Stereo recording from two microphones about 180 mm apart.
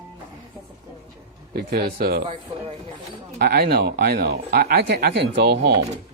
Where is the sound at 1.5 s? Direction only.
60° right (ahead or behind).